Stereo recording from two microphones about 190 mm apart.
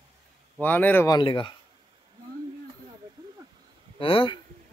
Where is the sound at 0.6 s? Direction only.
10° left (ahead or behind).